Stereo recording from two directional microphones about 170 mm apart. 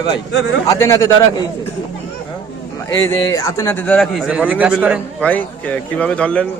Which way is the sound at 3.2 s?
20° left (ahead or behind).